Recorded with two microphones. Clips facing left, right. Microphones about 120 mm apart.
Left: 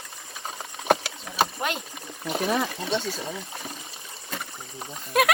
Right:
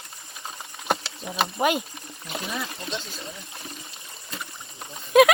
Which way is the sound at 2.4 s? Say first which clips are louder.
Left 8 dB; 65° left (ahead or behind).